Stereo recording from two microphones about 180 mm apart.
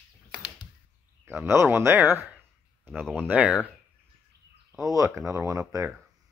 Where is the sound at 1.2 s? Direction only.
10° right (ahead or behind).